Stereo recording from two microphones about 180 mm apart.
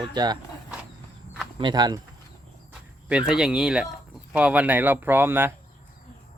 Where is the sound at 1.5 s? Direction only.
25° right (ahead or behind).